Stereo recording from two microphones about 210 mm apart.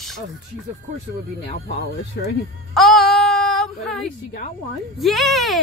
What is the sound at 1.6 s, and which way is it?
Speech, 55° left (ahead or behind).